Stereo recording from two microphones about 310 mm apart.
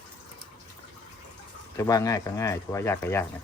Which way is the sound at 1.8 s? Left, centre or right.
Centre.